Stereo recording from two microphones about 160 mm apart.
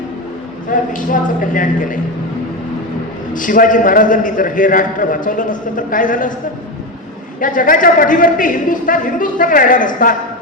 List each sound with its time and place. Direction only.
0.7 s a man's voice: 55° left (ahead or behind)
3.3 s a man's voice: 55° left (ahead or behind)
7.3 s a man's voice: 55° left (ahead or behind)